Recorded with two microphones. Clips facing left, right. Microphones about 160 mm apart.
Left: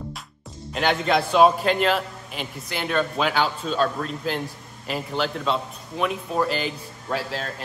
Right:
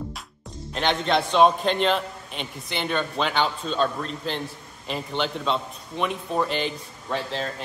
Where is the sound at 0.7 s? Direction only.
5° left (ahead or behind).